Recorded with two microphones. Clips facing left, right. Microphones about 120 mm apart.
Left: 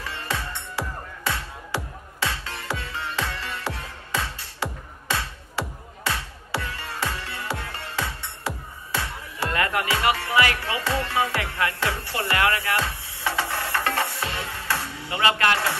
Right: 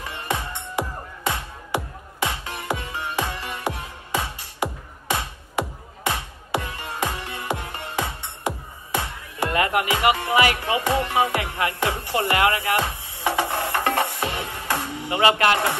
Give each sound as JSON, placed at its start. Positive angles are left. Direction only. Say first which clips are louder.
{"t": 0.0, "sound": "music", "louder": "right 2 dB", "side_deg": -15}